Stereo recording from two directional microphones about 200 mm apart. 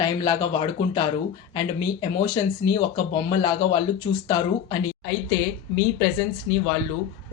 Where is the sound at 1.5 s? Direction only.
25° left (ahead or behind).